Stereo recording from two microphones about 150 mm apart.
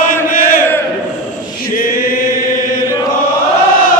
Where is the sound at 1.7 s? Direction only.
70° left (ahead or behind).